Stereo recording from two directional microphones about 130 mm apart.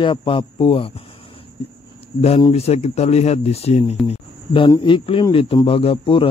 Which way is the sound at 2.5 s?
55° left (ahead or behind).